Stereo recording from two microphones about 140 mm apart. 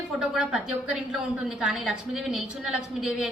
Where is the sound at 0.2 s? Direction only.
5° right (ahead or behind).